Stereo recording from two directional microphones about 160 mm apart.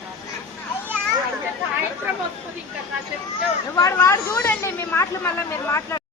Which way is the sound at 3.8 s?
20° left (ahead or behind).